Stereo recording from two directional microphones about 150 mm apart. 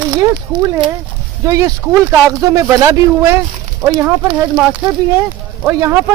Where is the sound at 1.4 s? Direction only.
20° right (ahead or behind).